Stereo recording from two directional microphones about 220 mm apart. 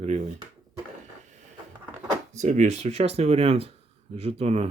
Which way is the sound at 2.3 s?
30° right (ahead or behind).